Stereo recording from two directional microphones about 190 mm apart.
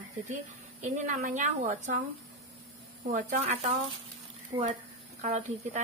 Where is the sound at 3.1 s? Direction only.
40° right (ahead or behind).